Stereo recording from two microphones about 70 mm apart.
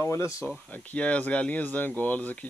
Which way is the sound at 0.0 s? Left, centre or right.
Left.